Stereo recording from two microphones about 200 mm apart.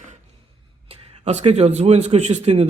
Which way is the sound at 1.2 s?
35° right (ahead or behind).